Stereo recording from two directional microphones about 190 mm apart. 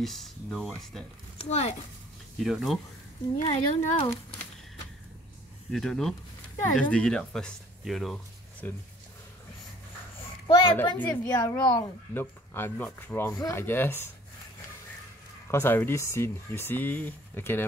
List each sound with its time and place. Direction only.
0.0 s speech: centre (ahead or behind)
1.4 s speech: 35° left (ahead or behind)
2.3 s speech: centre (ahead or behind)
3.3 s speech: 35° left (ahead or behind)
5.7 s speech: 5° left (ahead or behind)
10.4 s a woman's voice: 25° left (ahead or behind)
15.5 s speech: 10° left (ahead or behind)